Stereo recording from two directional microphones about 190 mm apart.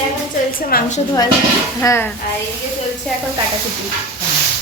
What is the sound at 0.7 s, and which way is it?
Speech, 55° left (ahead or behind).